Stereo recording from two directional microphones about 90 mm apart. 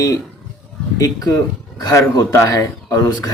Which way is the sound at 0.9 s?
40° left (ahead or behind).